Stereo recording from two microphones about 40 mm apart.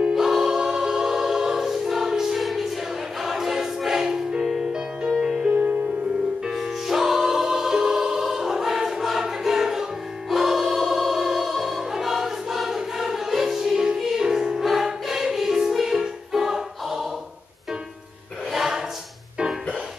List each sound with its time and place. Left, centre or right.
0.0 s music: centre
0.6 s choir: centre
5.0 s music: centre
5.5 s music: right
6.4 s music: centre
9.2 s choir: centre
10.3 s music: centre
11.9 s choir: centre
14.7 s music: centre
18.5 s choir: centre